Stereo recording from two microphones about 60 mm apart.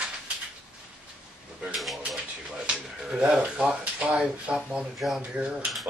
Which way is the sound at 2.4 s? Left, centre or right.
Centre.